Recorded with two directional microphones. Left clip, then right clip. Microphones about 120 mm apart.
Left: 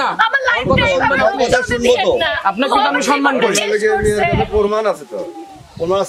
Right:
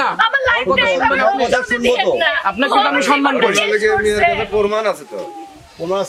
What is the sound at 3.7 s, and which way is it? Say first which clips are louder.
A man's voice: even; 15° right (ahead or behind).